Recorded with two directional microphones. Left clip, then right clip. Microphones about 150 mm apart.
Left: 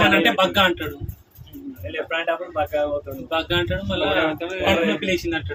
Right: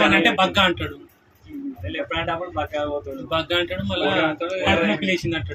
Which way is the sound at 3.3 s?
20° right (ahead or behind).